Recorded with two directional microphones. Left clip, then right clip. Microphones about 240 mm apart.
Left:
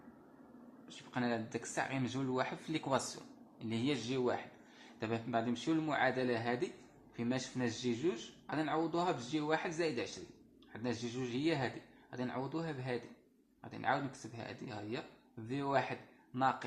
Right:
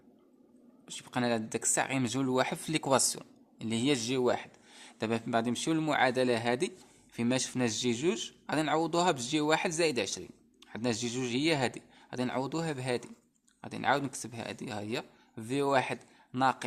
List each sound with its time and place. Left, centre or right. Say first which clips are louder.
0.9 s speech: right 7 dB; right